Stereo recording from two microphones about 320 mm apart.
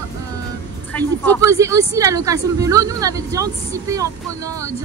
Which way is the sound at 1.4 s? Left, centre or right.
Centre.